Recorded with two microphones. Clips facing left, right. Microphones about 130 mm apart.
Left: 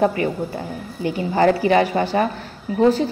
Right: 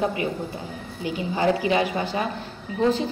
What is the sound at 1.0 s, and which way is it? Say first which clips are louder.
A woman's voice: left 6 dB; 55° left (ahead or behind).